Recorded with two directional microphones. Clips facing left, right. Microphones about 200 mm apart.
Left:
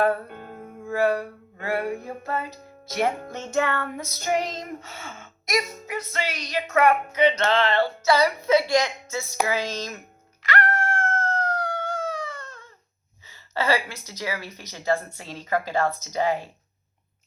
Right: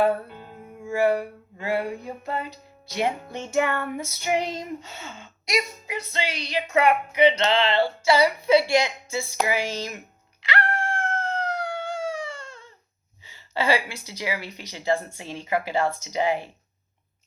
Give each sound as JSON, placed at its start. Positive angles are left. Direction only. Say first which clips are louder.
{"t": 0.3, "sound": "music", "louder": "left 3 dB", "side_deg": 55}
{"t": 0.9, "sound": "music", "louder": "right 1 dB", "side_deg": -10}
{"t": 1.6, "sound": "a woman's voice", "louder": "even", "side_deg": -15}
{"t": 10.5, "sound": "howl", "louder": "left 2 dB", "side_deg": -15}
{"t": 13.2, "sound": "a woman's voice", "louder": "right 1 dB", "side_deg": -15}